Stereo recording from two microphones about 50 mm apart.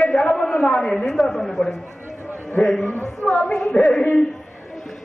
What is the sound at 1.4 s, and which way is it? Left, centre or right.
Speech, centre.